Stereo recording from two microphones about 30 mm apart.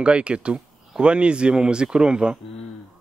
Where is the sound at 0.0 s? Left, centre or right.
Right.